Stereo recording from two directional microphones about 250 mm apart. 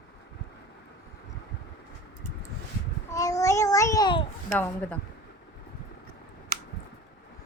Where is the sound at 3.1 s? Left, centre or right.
Centre.